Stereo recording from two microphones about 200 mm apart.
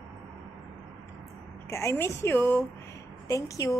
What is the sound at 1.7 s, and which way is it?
A woman's voice, 15° left (ahead or behind).